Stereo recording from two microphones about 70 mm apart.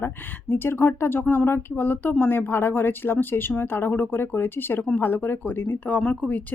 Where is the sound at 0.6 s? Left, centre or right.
Left.